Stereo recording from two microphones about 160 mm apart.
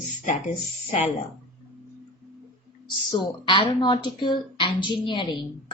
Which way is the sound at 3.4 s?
30° left (ahead or behind).